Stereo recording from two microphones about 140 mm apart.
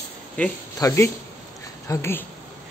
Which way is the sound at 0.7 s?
20° left (ahead or behind).